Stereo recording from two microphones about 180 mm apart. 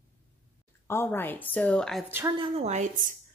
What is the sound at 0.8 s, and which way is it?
Speech, 10° left (ahead or behind).